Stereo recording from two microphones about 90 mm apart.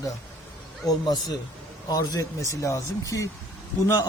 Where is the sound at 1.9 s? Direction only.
45° left (ahead or behind).